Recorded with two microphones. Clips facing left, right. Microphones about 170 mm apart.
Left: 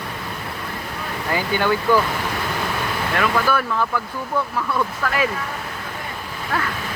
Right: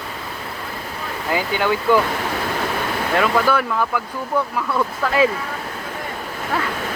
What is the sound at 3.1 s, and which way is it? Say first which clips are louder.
Speech: right 3 dB; 20° right (ahead or behind).